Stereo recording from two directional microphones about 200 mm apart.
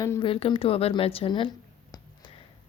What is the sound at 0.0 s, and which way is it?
A woman's voice, 20° left (ahead or behind).